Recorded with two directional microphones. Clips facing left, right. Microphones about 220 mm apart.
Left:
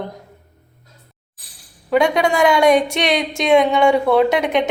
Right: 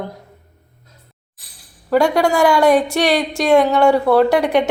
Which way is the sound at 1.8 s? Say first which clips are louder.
Right 1 dB; 5° right (ahead or behind).